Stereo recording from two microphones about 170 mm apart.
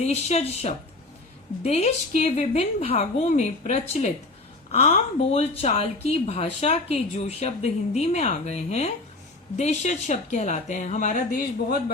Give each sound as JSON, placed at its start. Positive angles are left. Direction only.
{"t": 0.0, "sound": "speech", "side_deg": 40}